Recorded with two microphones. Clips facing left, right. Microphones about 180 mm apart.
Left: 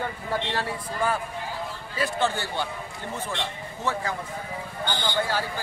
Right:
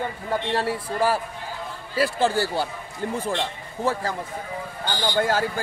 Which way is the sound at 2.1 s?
35° right (ahead or behind).